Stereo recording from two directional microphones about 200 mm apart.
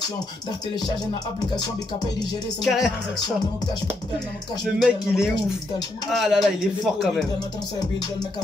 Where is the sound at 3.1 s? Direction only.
20° left (ahead or behind).